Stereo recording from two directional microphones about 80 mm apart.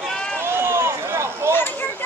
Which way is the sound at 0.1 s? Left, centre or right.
Centre.